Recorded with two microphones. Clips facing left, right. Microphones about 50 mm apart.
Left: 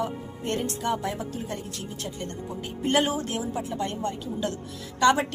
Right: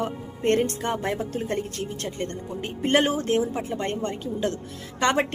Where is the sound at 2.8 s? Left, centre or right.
Right.